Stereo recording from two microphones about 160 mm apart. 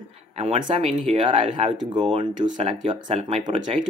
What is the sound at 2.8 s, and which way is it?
Speech, 40° right (ahead or behind).